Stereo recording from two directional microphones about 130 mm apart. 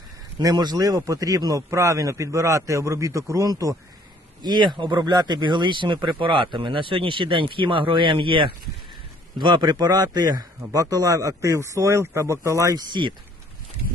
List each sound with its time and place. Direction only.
0.3 s a man's voice: 30° right (ahead or behind)